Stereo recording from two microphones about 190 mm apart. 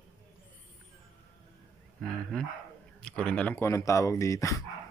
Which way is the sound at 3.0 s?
5° left (ahead or behind).